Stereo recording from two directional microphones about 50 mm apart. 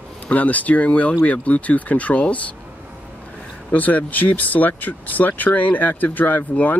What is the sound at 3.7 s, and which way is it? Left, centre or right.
Speech, left.